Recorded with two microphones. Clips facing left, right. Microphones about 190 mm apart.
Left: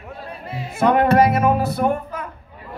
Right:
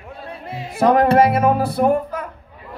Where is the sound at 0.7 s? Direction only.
35° right (ahead or behind).